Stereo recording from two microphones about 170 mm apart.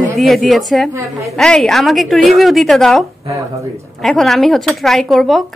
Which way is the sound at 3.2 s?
20° right (ahead or behind).